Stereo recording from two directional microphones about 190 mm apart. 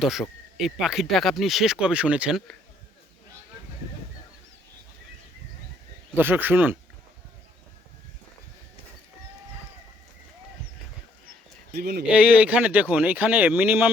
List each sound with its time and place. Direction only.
0.0 s speech: centre (ahead or behind)
6.1 s speech: 10° right (ahead or behind)
11.7 s speech: 55° right (ahead or behind)
12.0 s speech: 5° right (ahead or behind)